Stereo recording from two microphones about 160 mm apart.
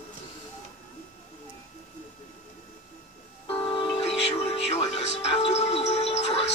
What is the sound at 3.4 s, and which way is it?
Music, 35° left (ahead or behind).